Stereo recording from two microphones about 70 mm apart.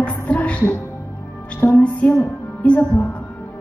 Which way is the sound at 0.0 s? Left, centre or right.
Left.